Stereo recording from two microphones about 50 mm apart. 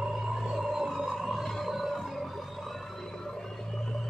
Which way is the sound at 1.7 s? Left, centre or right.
Centre.